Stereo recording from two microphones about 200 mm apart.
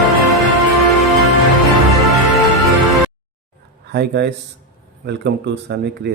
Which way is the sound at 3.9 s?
55° right (ahead or behind).